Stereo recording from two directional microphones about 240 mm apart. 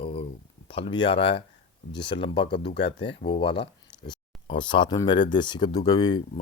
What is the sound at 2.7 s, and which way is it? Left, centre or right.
Speech, left.